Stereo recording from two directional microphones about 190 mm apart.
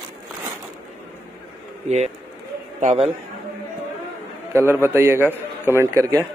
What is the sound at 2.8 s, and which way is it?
Speech, 40° right (ahead or behind).